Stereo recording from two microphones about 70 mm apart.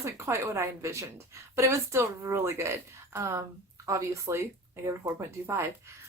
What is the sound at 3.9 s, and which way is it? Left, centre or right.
Speech, right.